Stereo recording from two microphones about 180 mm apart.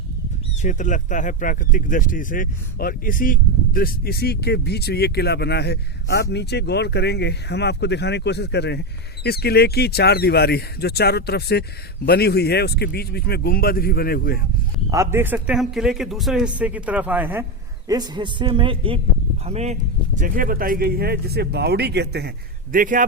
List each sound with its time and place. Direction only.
0.6 s speech: 45° left (ahead or behind)
14.8 s a man's voice: 15° right (ahead or behind)
17.8 s a man's voice: 25° right (ahead or behind)
20.1 s speech: 50° right (ahead or behind); by 22.3 s 65° right (ahead or behind)
22.7 s a man's voice: 50° right (ahead or behind)